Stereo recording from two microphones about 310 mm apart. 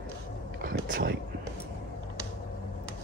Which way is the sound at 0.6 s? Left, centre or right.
Right.